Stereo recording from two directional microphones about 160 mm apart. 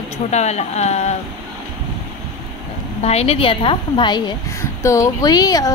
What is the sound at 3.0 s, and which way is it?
A woman's voice, 40° left (ahead or behind).